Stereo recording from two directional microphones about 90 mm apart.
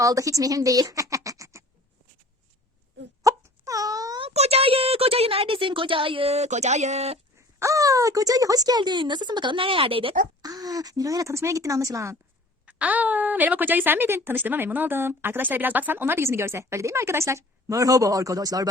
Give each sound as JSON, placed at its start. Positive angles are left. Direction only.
{"t": 0.0, "sound": "speech", "side_deg": -40}
{"t": 3.2, "sound": "wail", "side_deg": -40}
{"t": 4.2, "sound": "speech", "side_deg": -90}
{"t": 7.3, "sound": "speech", "side_deg": -35}
{"t": 10.4, "sound": "speech", "side_deg": -45}
{"t": 12.6, "sound": "a woman's voice", "side_deg": -15}